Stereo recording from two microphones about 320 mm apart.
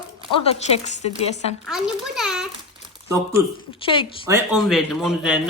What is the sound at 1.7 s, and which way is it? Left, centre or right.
Speech, centre.